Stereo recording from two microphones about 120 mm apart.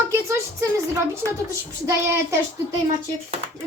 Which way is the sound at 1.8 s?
25° right (ahead or behind).